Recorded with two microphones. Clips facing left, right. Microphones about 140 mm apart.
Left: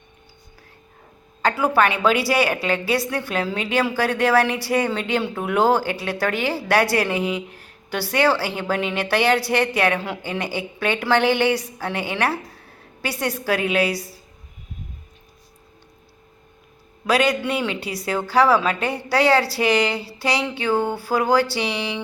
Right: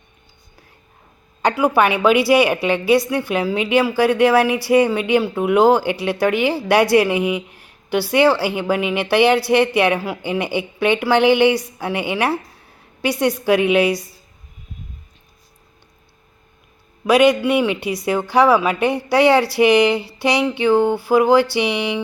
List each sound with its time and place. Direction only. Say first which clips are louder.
1.4 s a woman's voice: right 3 dB; 15° right (ahead or behind)
17.1 s a woman's voice: right 6 dB; 15° right (ahead or behind)